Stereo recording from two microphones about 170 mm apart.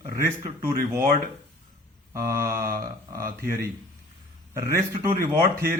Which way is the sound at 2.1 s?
20° right (ahead or behind).